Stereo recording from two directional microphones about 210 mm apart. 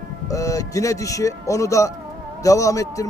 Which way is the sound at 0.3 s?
15° left (ahead or behind).